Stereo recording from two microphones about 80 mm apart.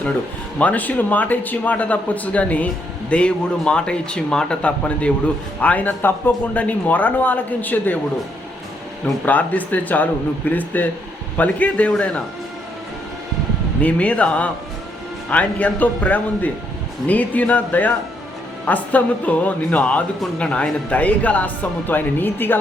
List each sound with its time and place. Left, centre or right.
0.6 s speech: centre
9.2 s speech: left
13.8 s speech: centre